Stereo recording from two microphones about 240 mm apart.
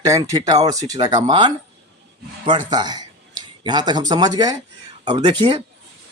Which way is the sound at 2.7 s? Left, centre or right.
Centre.